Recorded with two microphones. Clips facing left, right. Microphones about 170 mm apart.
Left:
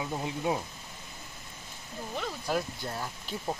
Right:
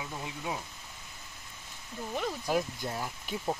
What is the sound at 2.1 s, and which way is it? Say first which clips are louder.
Speech: right 1 dB; 10° right (ahead or behind).